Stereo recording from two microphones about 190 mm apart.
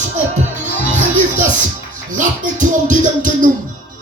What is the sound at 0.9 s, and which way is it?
Music, 40° right (ahead or behind).